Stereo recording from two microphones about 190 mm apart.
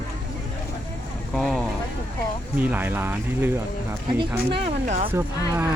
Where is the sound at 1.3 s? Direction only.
Centre (ahead or behind).